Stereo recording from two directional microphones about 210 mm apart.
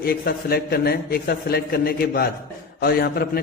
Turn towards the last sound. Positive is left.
turn(degrees=50)  # may be behind; listen again after turning